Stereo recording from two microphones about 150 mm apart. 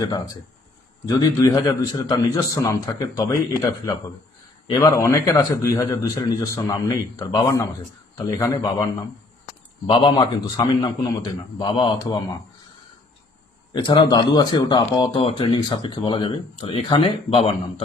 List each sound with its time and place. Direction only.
0.0 s a man's voice: 25° left (ahead or behind)
9.8 s speech: 35° left (ahead or behind)
13.7 s speech: 30° left (ahead or behind)